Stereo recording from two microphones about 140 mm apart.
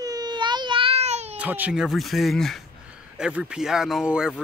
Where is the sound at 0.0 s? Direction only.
30° right (ahead or behind); by 1.3 s 50° right (ahead or behind).